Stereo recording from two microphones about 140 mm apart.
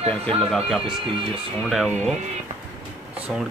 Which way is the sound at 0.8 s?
40° right (ahead or behind).